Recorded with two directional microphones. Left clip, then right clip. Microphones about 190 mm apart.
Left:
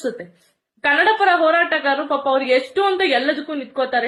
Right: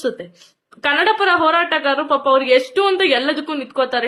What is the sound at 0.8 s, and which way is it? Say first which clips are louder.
A woman's voice: even; 25° right (ahead or behind).